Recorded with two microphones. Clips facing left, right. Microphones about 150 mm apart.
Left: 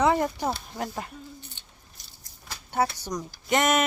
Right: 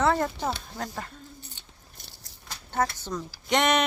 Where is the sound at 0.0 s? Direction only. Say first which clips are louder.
Left 2 dB; 15° left (ahead or behind).